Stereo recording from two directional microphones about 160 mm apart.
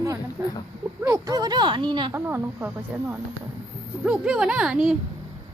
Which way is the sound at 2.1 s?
15° right (ahead or behind).